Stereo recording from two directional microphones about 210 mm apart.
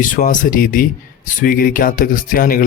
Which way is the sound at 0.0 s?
40° left (ahead or behind).